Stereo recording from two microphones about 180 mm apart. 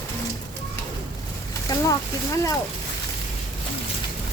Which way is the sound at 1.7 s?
20° left (ahead or behind).